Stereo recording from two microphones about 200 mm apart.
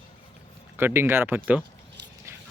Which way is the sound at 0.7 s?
10° right (ahead or behind).